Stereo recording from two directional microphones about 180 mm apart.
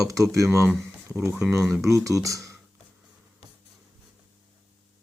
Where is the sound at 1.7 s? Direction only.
15° right (ahead or behind).